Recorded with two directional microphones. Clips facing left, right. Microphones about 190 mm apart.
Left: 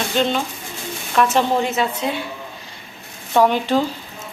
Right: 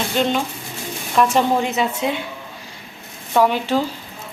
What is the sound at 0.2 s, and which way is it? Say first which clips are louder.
Speech: even; 15° right (ahead or behind).